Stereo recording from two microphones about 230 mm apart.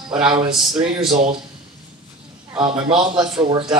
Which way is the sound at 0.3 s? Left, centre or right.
Centre.